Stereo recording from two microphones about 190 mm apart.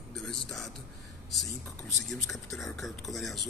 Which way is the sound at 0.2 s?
Centre (ahead or behind).